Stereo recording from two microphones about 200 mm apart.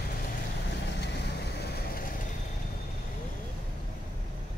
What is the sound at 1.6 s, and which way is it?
Vehicle, 50° left (ahead or behind).